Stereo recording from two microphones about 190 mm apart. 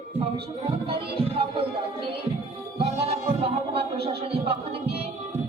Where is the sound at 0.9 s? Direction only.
30° right (ahead or behind).